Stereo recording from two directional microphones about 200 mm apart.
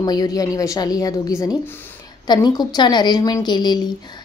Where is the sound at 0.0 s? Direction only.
20° left (ahead or behind).